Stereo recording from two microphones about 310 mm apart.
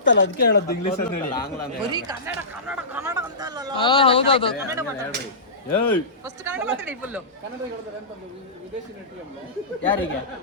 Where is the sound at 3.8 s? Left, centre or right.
Centre.